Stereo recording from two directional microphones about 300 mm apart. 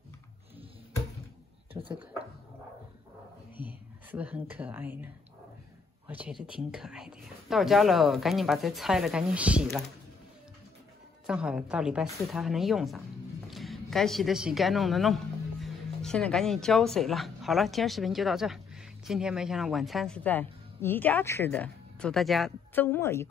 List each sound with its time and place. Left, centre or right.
1.7 s a sound: centre
3.5 s a woman's voice: centre
11.2 s a woman's voice: centre